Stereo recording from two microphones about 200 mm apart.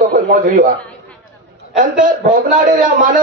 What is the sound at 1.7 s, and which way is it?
A man's voice, 40° right (ahead or behind).